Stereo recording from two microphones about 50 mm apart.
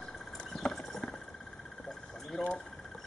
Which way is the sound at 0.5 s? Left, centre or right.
Centre.